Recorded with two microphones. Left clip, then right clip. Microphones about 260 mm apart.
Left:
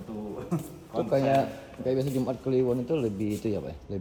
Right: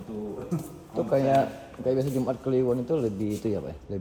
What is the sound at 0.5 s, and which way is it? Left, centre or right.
A man's voice, centre.